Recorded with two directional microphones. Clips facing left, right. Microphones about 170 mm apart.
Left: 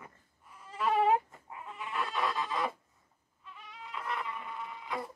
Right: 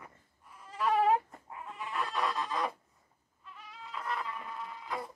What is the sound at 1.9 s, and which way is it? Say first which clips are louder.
Fowl: even; centre (ahead or behind).